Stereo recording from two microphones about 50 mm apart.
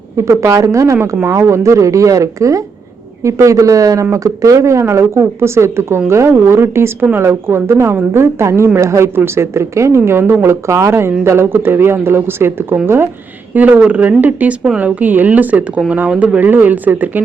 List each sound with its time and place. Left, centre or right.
0.2 s speech: right
1.2 s speech: right
4.6 s a man's voice: right
6.3 s a man's voice: right
9.1 s a man's voice: right
13.5 s speech: right
13.7 s speech: right
14.2 s speech: right
16.0 s speech: right
16.4 s speech: right